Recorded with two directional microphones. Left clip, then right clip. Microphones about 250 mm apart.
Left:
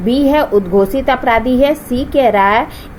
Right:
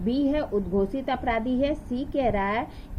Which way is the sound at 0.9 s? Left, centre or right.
Centre.